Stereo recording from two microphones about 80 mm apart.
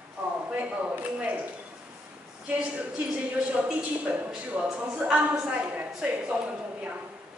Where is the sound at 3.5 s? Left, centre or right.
Centre.